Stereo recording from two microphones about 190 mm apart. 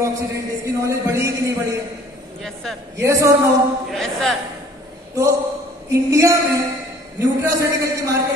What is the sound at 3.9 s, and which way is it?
Speech, centre (ahead or behind).